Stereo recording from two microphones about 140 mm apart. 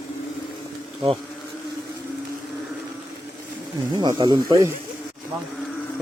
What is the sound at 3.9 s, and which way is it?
Speech, 30° right (ahead or behind).